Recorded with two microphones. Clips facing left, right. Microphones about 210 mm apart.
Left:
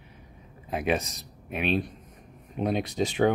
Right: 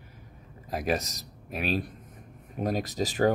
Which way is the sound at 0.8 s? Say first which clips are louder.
Left 2 dB; 40° right (ahead or behind).